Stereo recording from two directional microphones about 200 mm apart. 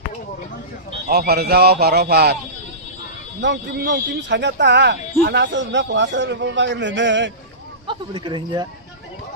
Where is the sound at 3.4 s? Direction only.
55° right (ahead or behind).